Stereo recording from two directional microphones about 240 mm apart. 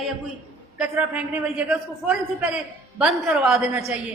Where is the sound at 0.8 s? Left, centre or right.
Centre.